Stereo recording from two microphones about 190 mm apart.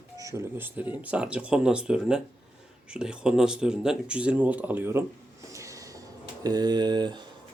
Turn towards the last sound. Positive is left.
turn(degrees=-25)  # may be behind; listen again after turning